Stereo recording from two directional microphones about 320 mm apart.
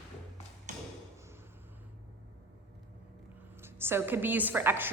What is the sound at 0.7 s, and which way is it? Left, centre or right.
Thump, right.